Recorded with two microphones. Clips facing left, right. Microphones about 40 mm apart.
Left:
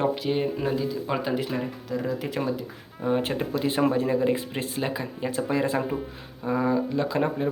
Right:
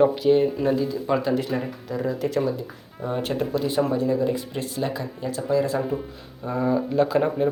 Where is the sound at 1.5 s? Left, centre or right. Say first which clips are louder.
Right 2 dB; centre; by 5.8 s left.